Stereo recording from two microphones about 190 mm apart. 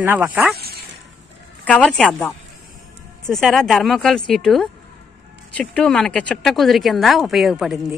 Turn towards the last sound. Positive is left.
turn(degrees=0)  # may be behind; listen again after turning